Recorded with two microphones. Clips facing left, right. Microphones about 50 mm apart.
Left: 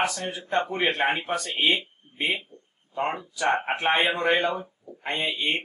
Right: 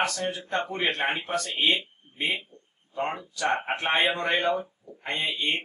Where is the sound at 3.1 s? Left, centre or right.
Centre.